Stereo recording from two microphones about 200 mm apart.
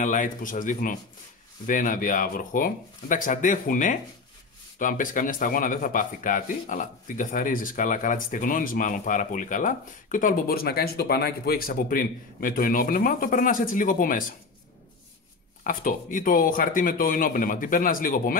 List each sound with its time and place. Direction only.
0.0 s speech: 40° left (ahead or behind)
15.6 s speech: 45° left (ahead or behind)